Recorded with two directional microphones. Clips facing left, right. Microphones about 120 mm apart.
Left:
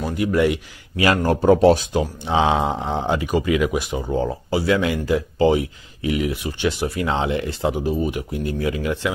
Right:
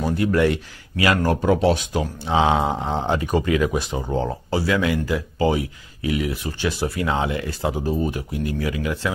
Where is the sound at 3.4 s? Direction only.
15° left (ahead or behind).